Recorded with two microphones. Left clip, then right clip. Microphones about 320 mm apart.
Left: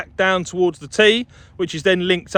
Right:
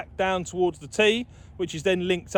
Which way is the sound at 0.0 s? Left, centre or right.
Left.